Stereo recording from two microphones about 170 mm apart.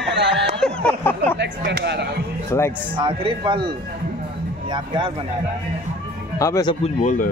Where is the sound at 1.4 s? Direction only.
90° right.